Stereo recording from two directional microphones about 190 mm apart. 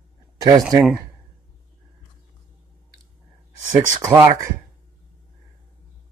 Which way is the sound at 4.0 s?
15° right (ahead or behind).